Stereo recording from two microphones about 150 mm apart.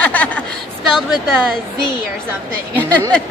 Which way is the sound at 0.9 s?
Centre (ahead or behind).